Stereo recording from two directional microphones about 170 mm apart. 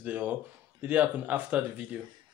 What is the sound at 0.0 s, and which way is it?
Speech, 10° right (ahead or behind).